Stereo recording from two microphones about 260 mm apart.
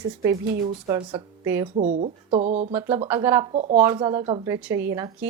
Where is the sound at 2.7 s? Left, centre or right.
Centre.